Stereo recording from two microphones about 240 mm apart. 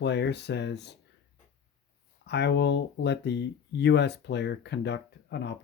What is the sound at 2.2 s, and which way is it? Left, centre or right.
Speech, left.